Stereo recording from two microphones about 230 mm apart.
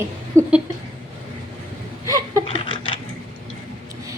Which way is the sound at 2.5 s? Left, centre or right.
Left.